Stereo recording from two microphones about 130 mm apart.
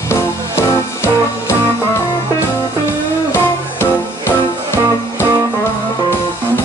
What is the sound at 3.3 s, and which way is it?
Music, 20° left (ahead or behind).